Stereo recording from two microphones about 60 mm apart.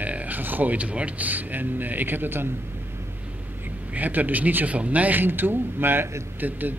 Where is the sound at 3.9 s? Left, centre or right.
Right.